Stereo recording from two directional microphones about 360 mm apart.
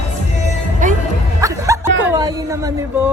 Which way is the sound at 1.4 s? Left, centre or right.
Centre.